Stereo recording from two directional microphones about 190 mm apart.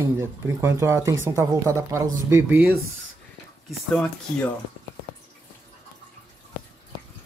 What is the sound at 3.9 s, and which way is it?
Speech, 5° left (ahead or behind).